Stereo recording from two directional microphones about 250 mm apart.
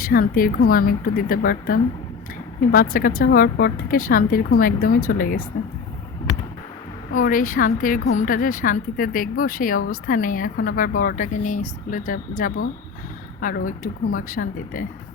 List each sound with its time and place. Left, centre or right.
0.0 s a woman's voice: left
7.2 s a woman's voice: left